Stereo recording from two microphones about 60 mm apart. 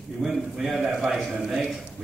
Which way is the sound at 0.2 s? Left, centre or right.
Centre.